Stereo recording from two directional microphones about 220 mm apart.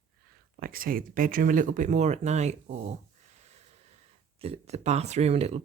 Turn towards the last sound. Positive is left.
turn(degrees=-30)  # may be behind; listen again after turning